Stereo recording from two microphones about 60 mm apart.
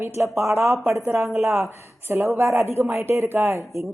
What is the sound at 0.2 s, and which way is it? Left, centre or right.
Speech, right.